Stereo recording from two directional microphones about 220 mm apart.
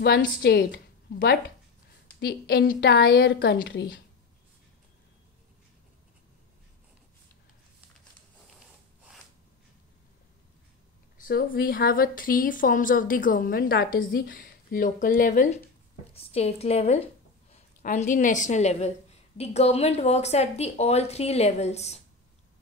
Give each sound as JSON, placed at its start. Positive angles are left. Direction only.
{"t": 0.0, "sound": "a woman's voice", "side_deg": 50}
{"t": 11.1, "sound": "speech", "side_deg": 40}
{"t": 16.1, "sound": "a woman's voice", "side_deg": 25}